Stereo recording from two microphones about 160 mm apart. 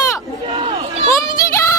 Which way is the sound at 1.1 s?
20° left (ahead or behind).